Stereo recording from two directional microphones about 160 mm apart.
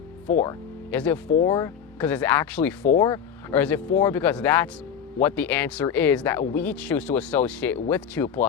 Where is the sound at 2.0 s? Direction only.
10° left (ahead or behind).